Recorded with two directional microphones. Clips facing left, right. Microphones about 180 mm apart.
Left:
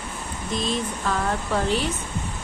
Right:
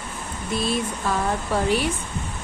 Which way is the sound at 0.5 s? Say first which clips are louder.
Right 2 dB; 10° right (ahead or behind).